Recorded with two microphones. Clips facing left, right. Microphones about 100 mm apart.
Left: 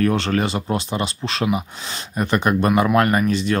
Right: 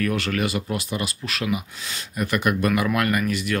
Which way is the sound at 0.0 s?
30° left (ahead or behind).